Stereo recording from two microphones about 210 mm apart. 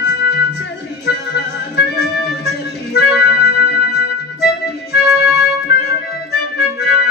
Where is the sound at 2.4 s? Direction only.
50° left (ahead or behind).